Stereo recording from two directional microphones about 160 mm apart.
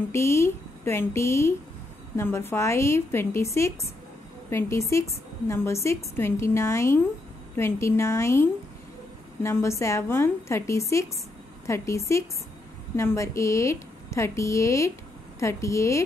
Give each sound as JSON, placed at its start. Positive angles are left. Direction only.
{"t": 0.1, "sound": "a woman's voice", "side_deg": 15}